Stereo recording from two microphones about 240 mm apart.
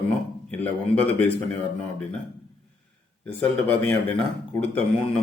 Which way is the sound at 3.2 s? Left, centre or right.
Centre.